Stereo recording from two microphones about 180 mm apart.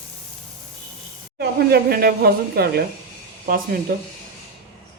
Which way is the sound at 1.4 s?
60° right (ahead or behind).